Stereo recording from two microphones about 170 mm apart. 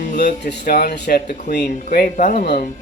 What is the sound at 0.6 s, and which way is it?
Speech, 65° left (ahead or behind).